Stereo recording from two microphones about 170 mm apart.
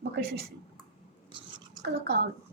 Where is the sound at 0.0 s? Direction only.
70° right (ahead or behind).